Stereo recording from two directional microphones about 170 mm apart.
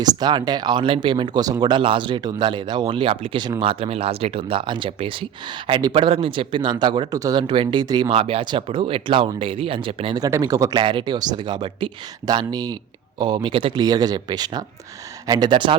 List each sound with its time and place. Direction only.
0.0 s speech: 25° right (ahead or behind)
10.2 s speech: 20° right (ahead or behind)